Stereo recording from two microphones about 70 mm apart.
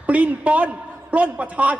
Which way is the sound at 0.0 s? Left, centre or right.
Right.